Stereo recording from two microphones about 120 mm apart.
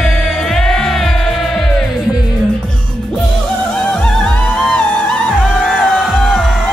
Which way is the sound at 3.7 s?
10° left (ahead or behind).